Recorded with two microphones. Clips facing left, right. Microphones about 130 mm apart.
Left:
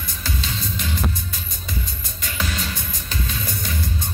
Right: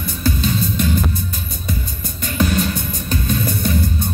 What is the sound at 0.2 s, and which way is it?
Music, 50° right (ahead or behind).